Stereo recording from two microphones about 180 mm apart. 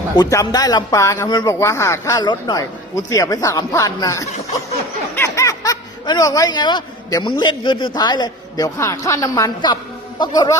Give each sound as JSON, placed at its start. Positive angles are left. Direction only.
{"t": 0.2, "sound": "speech", "side_deg": 20}